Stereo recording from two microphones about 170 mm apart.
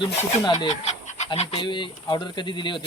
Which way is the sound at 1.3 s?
30° left (ahead or behind).